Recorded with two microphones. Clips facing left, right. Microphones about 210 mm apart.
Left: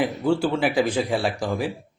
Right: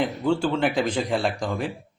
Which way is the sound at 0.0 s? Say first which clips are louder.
Left 1 dB; 5° left (ahead or behind).